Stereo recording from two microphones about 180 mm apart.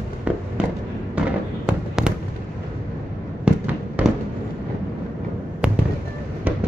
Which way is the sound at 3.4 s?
10° right (ahead or behind).